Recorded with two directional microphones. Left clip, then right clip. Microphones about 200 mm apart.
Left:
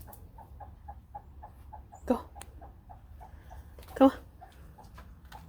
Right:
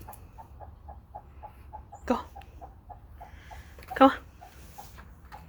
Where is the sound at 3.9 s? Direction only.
15° left (ahead or behind).